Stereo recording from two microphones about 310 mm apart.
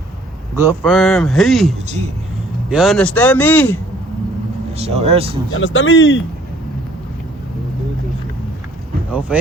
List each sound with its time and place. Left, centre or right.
0.5 s a man's voice: centre
4.8 s speech: centre
5.5 s speech: left
9.3 s speech: centre